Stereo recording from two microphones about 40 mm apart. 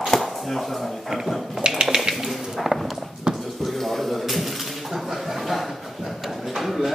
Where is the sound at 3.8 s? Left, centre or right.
Centre.